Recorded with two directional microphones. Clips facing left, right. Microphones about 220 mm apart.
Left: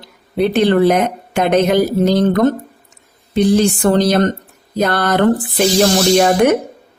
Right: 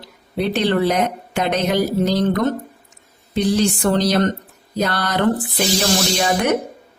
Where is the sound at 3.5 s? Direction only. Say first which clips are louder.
Left 4 dB; 50° left (ahead or behind).